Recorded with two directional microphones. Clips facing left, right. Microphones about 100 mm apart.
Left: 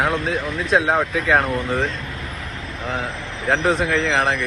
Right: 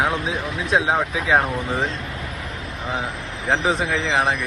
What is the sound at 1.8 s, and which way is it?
Speech, 30° right (ahead or behind).